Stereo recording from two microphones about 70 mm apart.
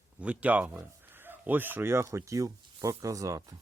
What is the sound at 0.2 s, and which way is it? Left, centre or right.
Speech, right.